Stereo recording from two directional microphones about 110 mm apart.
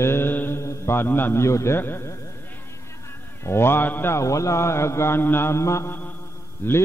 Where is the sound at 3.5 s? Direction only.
20° left (ahead or behind).